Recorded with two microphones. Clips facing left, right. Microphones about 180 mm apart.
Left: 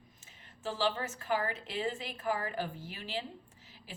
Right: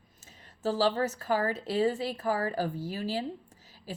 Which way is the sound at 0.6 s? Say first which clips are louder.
Right 7 dB; 40° right (ahead or behind).